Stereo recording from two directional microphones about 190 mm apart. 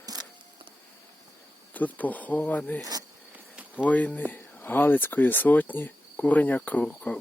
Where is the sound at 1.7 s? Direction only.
10° left (ahead or behind).